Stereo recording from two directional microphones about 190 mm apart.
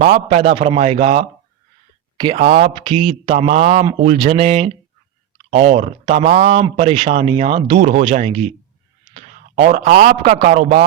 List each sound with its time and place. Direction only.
0.1 s speech: 40° right (ahead or behind)
7.8 s a man's voice: 40° right (ahead or behind)